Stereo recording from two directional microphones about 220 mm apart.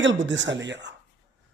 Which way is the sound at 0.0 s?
55° right (ahead or behind).